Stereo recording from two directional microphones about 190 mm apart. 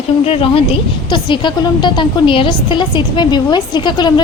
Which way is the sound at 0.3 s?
30° left (ahead or behind).